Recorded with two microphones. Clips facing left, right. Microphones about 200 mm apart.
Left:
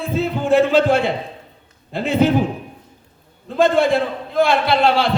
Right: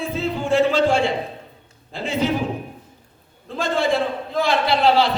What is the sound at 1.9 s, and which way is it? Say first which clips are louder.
Speech: left 6 dB; 60° left (ahead or behind).